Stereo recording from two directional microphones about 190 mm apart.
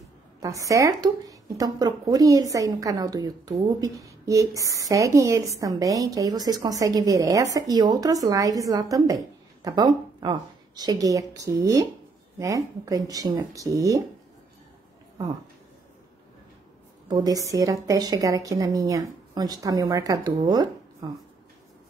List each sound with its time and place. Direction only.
0.4 s a woman's voice: 15° right (ahead or behind)
17.1 s a woman's voice: 20° right (ahead or behind)